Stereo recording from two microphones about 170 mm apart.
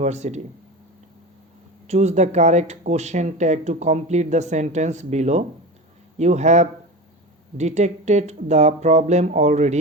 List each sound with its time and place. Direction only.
0.0 s speech: 40° right (ahead or behind)
1.9 s speech: 40° right (ahead or behind)